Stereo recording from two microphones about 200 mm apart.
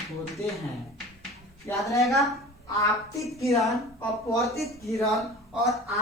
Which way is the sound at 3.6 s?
Centre (ahead or behind).